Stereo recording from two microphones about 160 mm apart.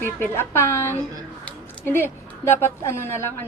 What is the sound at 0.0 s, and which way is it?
A woman's voice, 15° left (ahead or behind).